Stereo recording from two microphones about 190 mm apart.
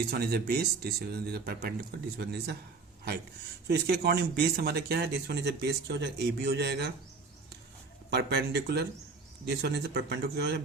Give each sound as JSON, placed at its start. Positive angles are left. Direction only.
{"t": 0.1, "sound": "speech", "side_deg": -55}
{"t": 3.7, "sound": "speech", "side_deg": -60}
{"t": 8.1, "sound": "speech", "side_deg": -60}